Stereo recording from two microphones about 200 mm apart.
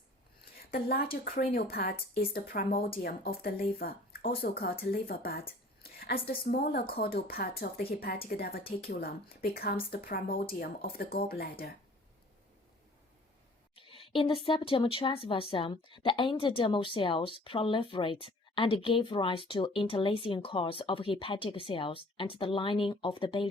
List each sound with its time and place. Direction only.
0.5 s a sound: 50° left (ahead or behind)
1.1 s speech: 50° left (ahead or behind)
13.7 s speech: 25° left (ahead or behind)